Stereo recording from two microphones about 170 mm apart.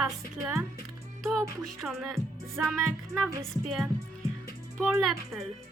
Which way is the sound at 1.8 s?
Centre (ahead or behind).